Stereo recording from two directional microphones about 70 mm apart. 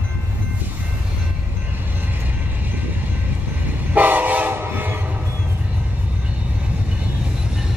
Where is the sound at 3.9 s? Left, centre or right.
Right.